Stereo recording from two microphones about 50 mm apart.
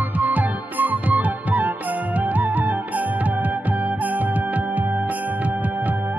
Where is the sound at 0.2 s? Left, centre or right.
Right.